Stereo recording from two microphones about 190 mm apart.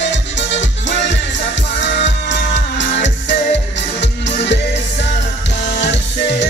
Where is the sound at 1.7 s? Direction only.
65° left (ahead or behind).